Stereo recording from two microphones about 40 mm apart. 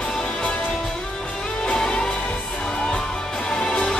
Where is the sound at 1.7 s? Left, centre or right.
Centre.